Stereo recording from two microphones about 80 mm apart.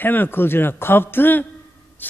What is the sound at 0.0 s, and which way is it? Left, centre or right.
Speech, left.